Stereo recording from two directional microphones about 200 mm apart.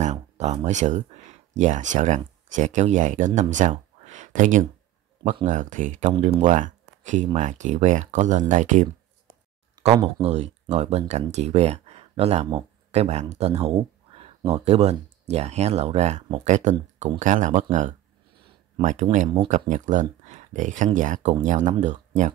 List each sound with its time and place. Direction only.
0.0 s speech: 35° right (ahead or behind)
9.8 s speech: 25° right (ahead or behind)
10.2 s speech: 35° right (ahead or behind)